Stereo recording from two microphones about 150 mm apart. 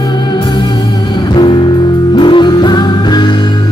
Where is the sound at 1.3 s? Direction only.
30° left (ahead or behind).